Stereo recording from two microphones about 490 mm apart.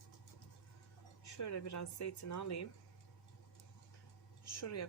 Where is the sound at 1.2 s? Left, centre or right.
Left.